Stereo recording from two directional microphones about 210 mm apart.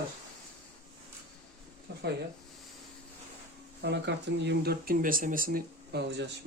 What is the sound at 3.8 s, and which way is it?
Speech, 55° right (ahead or behind).